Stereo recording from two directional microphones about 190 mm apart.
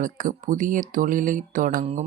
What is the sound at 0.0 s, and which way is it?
Speech, 45° right (ahead or behind).